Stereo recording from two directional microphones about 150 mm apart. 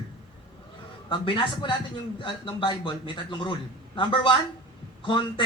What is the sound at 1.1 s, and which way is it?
A man's voice, 30° left (ahead or behind).